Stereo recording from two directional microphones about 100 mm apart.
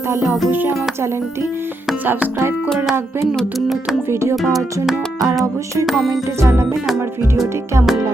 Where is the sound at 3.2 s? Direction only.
Centre (ahead or behind).